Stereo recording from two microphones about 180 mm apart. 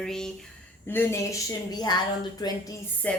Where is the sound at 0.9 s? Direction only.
15° left (ahead or behind).